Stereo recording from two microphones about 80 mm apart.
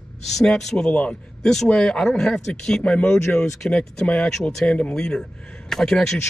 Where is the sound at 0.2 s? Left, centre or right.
Centre.